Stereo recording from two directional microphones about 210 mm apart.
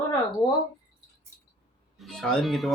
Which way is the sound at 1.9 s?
Centre (ahead or behind).